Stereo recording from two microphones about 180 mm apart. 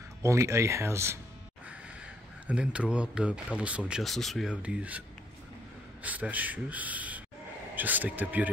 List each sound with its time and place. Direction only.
0.2 s speech: 15° right (ahead or behind)
2.4 s speech: 5° right (ahead or behind)
6.0 s speech: 10° right (ahead or behind)